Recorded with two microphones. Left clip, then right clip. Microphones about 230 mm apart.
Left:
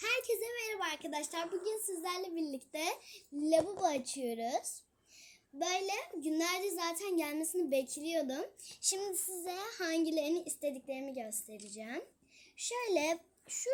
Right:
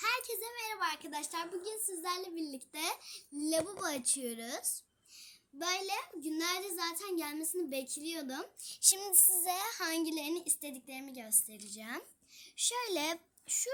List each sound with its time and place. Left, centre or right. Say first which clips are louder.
0.0 s a child's voice: left 1 dB; centre; by 13.7 s right